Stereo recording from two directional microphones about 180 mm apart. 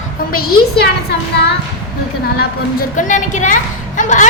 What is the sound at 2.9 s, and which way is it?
A woman's voice, 45° left (ahead or behind).